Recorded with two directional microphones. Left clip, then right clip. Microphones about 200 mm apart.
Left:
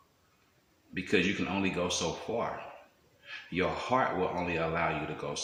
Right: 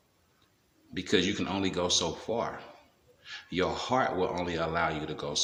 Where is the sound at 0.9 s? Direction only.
20° right (ahead or behind).